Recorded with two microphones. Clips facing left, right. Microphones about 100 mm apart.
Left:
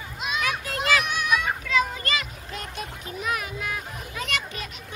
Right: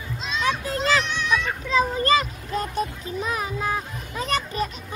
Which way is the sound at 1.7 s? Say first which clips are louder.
Right 7 dB; 35° right (ahead or behind).